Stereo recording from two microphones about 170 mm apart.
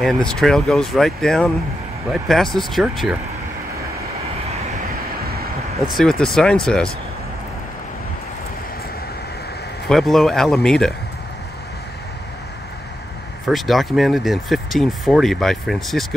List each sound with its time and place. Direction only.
0.0 s speech: 5° left (ahead or behind)
5.2 s vehicle: 65° right (ahead or behind)
5.9 s speech: 5° left (ahead or behind)
9.8 s speech: centre (ahead or behind)
13.5 s speech: centre (ahead or behind)